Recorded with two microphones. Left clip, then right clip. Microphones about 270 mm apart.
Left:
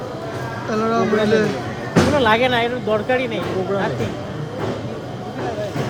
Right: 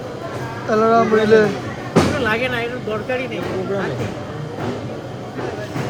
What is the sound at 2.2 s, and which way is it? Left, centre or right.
Speech, left.